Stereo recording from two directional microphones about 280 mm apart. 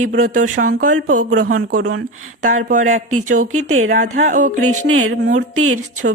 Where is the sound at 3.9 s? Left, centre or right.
Right.